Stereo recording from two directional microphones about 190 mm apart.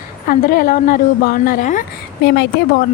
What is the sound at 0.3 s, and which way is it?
A woman's voice, 50° left (ahead or behind).